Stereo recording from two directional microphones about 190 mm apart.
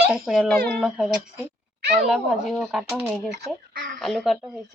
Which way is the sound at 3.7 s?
45° right (ahead or behind).